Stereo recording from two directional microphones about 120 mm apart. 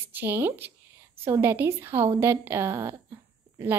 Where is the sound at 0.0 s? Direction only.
20° right (ahead or behind).